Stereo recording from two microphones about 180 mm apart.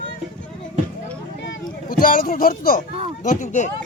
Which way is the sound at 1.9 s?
50° left (ahead or behind).